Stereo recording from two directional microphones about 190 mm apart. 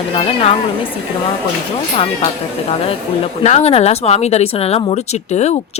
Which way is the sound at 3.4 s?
35° left (ahead or behind).